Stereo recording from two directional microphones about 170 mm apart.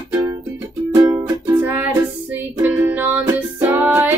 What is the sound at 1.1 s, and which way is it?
Music, 15° right (ahead or behind).